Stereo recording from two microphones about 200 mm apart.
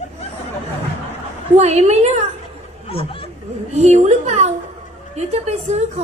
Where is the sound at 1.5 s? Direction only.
35° right (ahead or behind).